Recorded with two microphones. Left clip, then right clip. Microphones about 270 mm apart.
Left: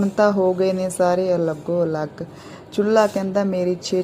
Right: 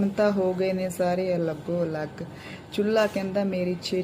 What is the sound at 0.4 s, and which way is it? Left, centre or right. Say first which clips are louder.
Speech: left 6 dB; centre.